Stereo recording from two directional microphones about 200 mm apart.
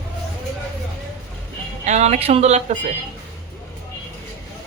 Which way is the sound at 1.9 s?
35° right (ahead or behind).